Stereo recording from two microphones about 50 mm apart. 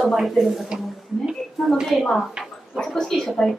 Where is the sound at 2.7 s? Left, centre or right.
Centre.